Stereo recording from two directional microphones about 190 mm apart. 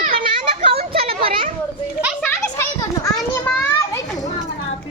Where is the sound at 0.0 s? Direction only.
50° right (ahead or behind).